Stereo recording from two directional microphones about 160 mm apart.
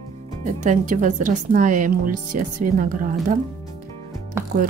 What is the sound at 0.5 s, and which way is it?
Speech, 50° right (ahead or behind).